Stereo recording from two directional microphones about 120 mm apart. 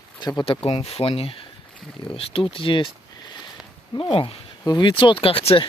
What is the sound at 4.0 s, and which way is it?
Speech, 45° left (ahead or behind).